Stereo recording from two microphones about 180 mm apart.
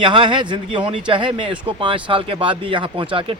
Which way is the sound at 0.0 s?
25° right (ahead or behind).